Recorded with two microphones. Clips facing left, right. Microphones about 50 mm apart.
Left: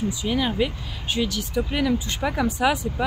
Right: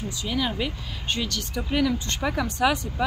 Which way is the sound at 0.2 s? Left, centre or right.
Centre.